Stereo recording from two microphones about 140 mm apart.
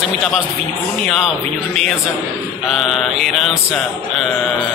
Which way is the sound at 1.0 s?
5° left (ahead or behind).